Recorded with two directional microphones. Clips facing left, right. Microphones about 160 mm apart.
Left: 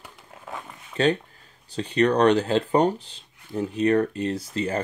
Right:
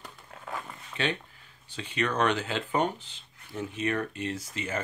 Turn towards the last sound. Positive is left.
turn(degrees=35)  # may be behind; listen again after turning